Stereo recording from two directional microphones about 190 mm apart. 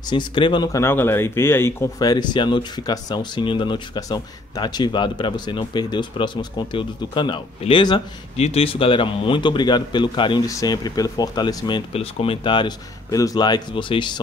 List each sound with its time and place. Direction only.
0.0 s speech: 25° left (ahead or behind)